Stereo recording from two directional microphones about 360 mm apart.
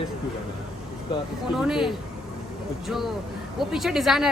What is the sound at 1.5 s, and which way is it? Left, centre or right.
Speech, centre.